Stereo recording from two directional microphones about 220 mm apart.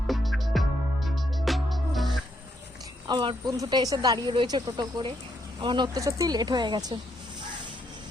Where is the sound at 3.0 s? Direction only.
20° right (ahead or behind).